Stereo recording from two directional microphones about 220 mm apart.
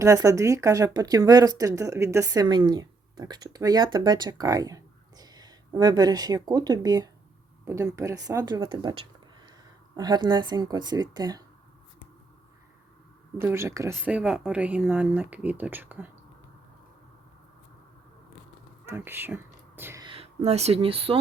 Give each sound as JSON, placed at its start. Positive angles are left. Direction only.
{"t": 0.0, "sound": "speech", "side_deg": -15}
{"t": 13.4, "sound": "speech", "side_deg": -10}
{"t": 18.9, "sound": "speech", "side_deg": -10}